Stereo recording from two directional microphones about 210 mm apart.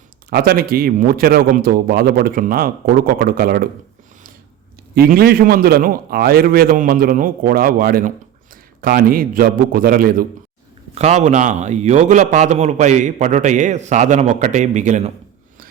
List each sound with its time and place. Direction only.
0.3 s a man's voice: 45° right (ahead or behind)
4.9 s a man's voice: 45° right (ahead or behind)
10.9 s a man's voice: 35° right (ahead or behind)